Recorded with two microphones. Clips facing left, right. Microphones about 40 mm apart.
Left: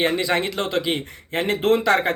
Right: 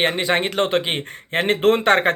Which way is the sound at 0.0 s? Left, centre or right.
Right.